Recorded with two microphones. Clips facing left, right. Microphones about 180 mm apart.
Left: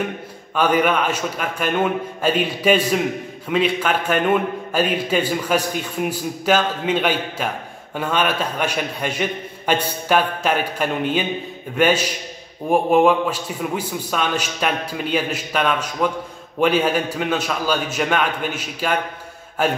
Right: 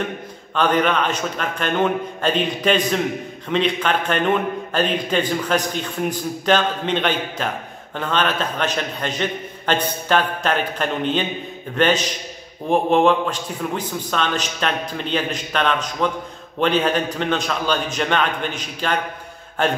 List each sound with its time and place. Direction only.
0.6 s a man's voice: 10° left (ahead or behind)